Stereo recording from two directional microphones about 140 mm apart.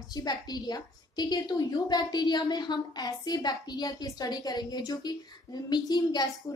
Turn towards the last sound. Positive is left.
turn(degrees=30)  # may be behind; listen again after turning